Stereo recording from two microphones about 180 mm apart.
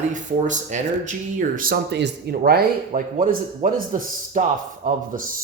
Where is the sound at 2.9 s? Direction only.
45° right (ahead or behind).